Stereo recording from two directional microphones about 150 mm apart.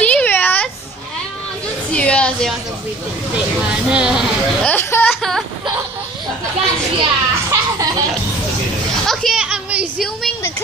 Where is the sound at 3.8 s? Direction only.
5° right (ahead or behind).